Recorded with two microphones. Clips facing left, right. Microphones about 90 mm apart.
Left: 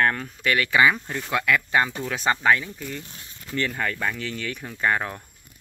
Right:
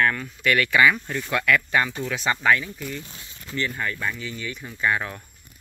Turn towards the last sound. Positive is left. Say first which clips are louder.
# left 1 dB
turn(degrees=40)  # may be behind; listen again after turning